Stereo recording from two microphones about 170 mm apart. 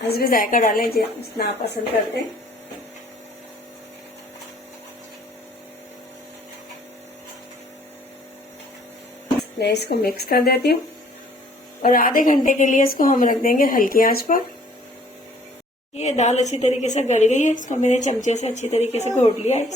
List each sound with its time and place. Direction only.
0.1 s a woman's voice: 60° left (ahead or behind)
0.9 s a woman's voice: 70° left (ahead or behind)
9.6 s a woman's voice: 75° left (ahead or behind)
11.8 s a woman's voice: 55° left (ahead or behind)
16.0 s a woman's voice: 40° left (ahead or behind)